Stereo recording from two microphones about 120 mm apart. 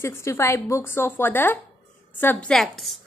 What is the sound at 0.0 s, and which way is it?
A woman's voice, 20° left (ahead or behind).